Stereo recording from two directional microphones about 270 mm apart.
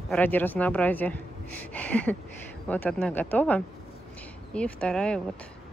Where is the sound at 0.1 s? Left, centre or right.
Centre.